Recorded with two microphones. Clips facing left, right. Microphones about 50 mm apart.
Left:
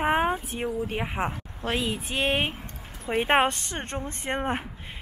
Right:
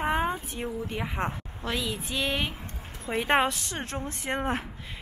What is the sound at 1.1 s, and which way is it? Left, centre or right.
Speech, centre.